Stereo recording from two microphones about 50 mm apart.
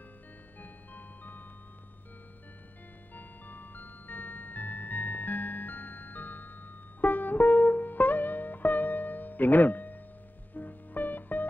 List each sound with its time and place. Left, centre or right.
0.6 s music: left
3.2 s music: left